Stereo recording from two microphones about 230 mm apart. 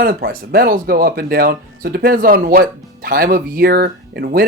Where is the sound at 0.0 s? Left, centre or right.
Right.